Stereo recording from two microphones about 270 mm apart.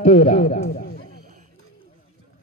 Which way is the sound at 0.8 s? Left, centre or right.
Left.